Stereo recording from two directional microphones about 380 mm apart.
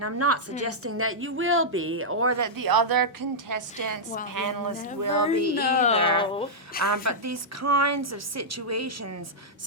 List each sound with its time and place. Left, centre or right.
0.0 s a woman's voice: right
5.5 s speech: left
6.8 s a woman's voice: right